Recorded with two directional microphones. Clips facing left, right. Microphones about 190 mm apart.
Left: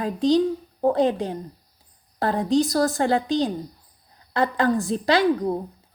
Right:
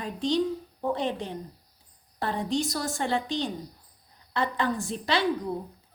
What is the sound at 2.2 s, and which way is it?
Speech, 40° left (ahead or behind).